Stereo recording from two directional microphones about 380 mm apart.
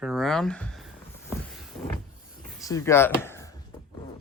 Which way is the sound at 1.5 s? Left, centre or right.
Centre.